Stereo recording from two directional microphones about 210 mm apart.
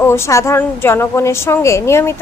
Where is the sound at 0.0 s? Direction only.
15° left (ahead or behind).